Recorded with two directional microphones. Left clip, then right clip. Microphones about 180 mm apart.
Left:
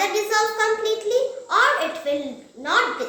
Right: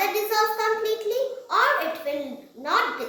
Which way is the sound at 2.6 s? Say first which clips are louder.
Left 3 dB; 35° left (ahead or behind).